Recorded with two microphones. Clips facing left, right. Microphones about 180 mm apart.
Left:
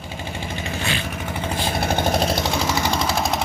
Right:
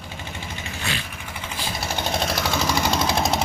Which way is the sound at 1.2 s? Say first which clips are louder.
Left 8 dB; 50° left (ahead or behind).